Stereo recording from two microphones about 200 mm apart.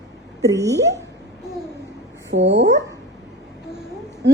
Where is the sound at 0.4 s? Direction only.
15° right (ahead or behind).